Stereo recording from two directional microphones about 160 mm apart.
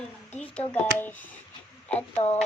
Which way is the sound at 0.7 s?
10° left (ahead or behind).